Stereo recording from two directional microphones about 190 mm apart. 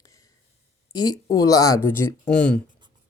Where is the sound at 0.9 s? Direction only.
20° left (ahead or behind); by 2.6 s 5° left (ahead or behind).